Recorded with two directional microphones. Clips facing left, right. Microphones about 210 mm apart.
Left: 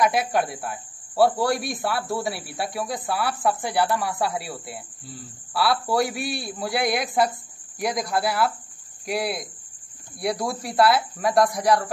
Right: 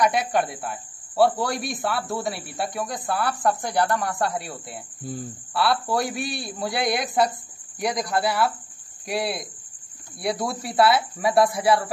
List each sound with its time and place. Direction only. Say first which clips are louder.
0.0 s a man's voice: even; centre (ahead or behind)
5.0 s speech: right 8 dB; 50° right (ahead or behind)
5.5 s a man's voice: even; centre (ahead or behind)